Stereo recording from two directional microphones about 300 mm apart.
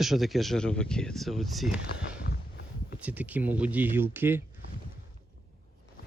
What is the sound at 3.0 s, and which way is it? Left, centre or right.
Speech, centre.